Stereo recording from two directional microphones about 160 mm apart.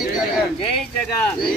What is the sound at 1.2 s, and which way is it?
Speech, 10° left (ahead or behind).